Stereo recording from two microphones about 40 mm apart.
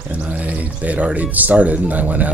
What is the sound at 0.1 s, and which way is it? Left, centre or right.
Speech, right.